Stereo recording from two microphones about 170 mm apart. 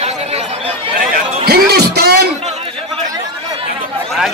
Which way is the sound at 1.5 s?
70° right (ahead or behind).